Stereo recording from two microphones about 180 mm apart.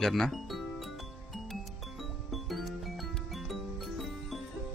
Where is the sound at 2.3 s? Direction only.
Centre (ahead or behind).